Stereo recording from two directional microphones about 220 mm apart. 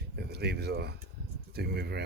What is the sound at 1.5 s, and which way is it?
Speech, 45° right (ahead or behind).